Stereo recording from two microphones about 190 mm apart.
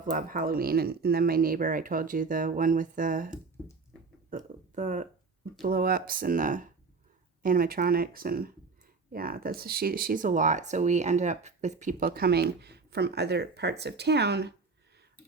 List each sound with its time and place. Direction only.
0.0 s speech: 45° right (ahead or behind)
4.3 s a sound: 45° right (ahead or behind)
5.6 s speech: 50° right (ahead or behind)